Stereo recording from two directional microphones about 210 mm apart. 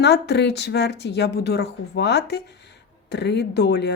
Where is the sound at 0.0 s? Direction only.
50° left (ahead or behind).